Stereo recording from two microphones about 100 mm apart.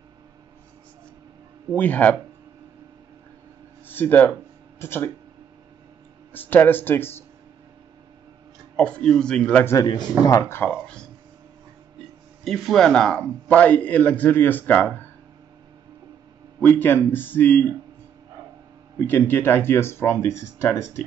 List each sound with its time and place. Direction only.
1.7 s a man's voice: 15° left (ahead or behind)
3.8 s a sound: 20° left (ahead or behind)
4.7 s speech: 25° left (ahead or behind)
6.3 s speech: 20° left (ahead or behind)
8.7 s a man's voice: 10° left (ahead or behind)
12.4 s a man's voice: 5° left (ahead or behind); by 15.0 s 20° left (ahead or behind)
16.6 s speech: 20° left (ahead or behind)
18.9 s speech: 20° left (ahead or behind)